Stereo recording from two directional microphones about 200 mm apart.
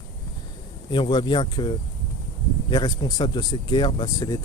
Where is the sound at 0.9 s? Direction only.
25° left (ahead or behind).